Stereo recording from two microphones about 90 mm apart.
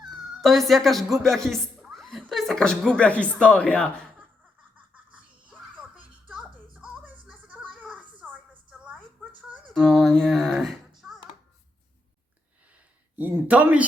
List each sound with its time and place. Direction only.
0.0 s a woman's voice: centre (ahead or behind)
6.2 s music: 15° right (ahead or behind)
8.2 s a sound: 5° right (ahead or behind)
9.6 s speech: centre (ahead or behind)
13.1 s speech: 15° right (ahead or behind)